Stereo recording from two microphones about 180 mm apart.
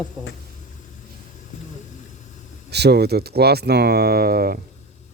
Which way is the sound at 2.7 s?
65° right (ahead or behind).